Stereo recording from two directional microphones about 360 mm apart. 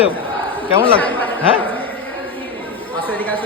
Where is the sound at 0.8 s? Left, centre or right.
Centre.